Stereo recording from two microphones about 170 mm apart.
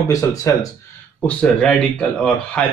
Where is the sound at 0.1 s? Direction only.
20° left (ahead or behind).